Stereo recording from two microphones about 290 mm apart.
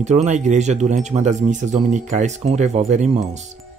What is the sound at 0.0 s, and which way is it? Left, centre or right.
Speech, right.